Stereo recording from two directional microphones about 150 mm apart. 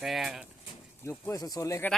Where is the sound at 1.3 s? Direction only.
25° left (ahead or behind).